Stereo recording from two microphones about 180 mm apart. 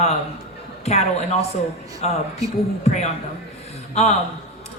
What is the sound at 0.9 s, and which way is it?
A woman's voice, 35° left (ahead or behind).